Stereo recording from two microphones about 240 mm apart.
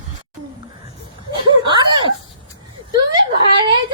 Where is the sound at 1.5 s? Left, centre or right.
Centre.